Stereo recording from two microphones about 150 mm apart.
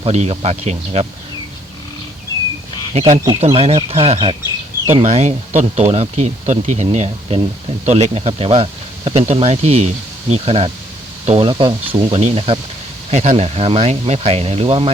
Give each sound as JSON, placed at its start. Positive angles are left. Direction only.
{"t": 0.0, "sound": "speech", "side_deg": -45}
{"t": 2.9, "sound": "speech", "side_deg": -45}